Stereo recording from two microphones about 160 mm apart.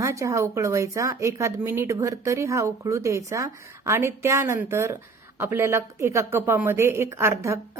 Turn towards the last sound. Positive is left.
turn(degrees=-20)  # may be behind; listen again after turning